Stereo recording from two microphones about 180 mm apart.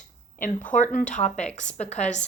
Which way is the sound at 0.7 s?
45° left (ahead or behind).